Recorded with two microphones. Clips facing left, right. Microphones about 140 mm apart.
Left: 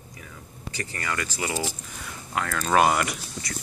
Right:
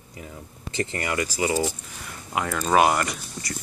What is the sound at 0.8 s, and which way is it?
Speech, 25° right (ahead or behind).